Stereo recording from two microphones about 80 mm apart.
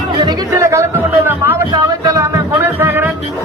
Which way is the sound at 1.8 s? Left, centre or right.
Right.